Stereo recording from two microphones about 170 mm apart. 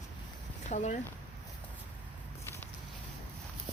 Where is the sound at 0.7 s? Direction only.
45° left (ahead or behind).